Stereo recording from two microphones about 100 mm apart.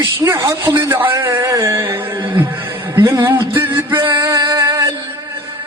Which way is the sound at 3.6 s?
25° right (ahead or behind).